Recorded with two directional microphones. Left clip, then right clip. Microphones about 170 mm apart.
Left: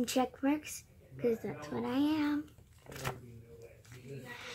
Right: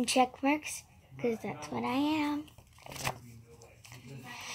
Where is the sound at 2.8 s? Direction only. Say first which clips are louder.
Right 4 dB; 10° right (ahead or behind).